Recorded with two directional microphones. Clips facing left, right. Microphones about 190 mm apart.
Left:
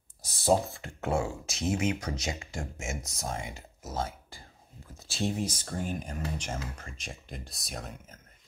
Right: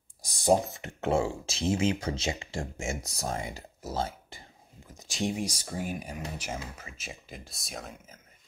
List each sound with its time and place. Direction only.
0.2 s speech: 15° right (ahead or behind); by 4.4 s 30° right (ahead or behind)
4.8 s speech: 15° right (ahead or behind); by 8.2 s centre (ahead or behind)